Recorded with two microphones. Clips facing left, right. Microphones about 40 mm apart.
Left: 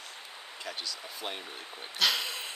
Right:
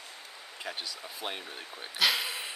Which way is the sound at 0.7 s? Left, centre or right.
Centre.